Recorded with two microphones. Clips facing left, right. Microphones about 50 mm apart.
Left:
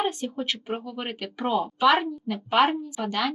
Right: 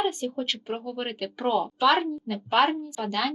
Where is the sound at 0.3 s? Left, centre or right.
Centre.